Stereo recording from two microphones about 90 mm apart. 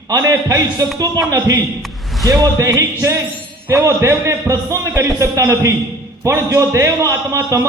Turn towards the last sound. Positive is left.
turn(degrees=-35)  # may be behind; listen again after turning